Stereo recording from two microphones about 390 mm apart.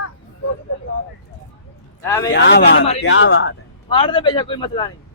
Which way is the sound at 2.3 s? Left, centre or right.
Left.